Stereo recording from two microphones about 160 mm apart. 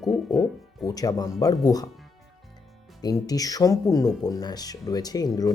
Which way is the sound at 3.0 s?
25° left (ahead or behind).